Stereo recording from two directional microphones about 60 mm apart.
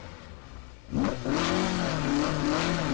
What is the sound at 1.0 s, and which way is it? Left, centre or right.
Vehicle, left.